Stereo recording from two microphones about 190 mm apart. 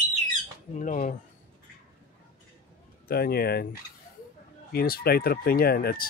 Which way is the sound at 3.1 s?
55° left (ahead or behind).